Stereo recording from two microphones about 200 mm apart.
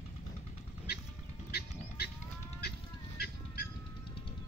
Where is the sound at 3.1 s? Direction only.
55° left (ahead or behind).